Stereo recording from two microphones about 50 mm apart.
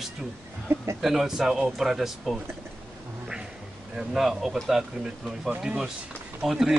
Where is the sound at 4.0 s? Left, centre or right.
Centre.